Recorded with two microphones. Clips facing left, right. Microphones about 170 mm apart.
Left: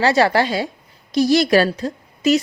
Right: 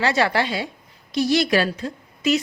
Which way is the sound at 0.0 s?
35° left (ahead or behind).